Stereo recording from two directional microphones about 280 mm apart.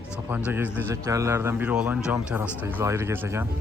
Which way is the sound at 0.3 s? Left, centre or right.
Centre.